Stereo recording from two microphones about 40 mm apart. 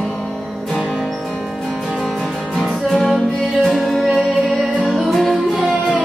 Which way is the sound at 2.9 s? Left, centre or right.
Centre.